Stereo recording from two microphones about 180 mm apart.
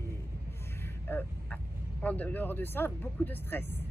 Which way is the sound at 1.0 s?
10° left (ahead or behind).